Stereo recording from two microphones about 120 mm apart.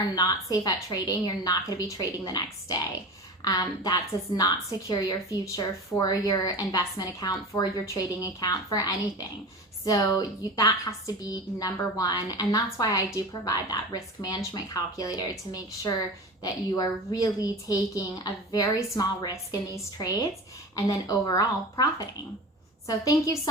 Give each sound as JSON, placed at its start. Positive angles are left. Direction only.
{"t": 0.2, "sound": "speech", "side_deg": 30}